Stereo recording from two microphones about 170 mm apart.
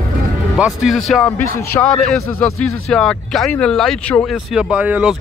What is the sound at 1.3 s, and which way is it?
Speech, 15° left (ahead or behind).